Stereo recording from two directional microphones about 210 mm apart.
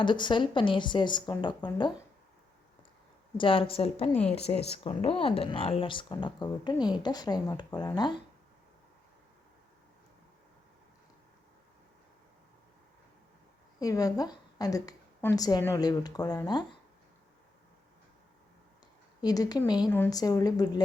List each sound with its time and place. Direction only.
0.0 s speech: 20° left (ahead or behind)
3.3 s speech: 25° left (ahead or behind)
4.1 s a woman's voice: 5° left (ahead or behind)
4.4 s speech: 30° left (ahead or behind)
13.7 s a woman's voice: 15° left (ahead or behind)
19.2 s a woman's voice: 20° left (ahead or behind)